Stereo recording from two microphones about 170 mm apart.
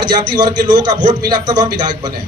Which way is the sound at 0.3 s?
25° right (ahead or behind).